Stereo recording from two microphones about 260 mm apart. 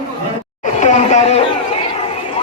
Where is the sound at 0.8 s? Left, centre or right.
Left.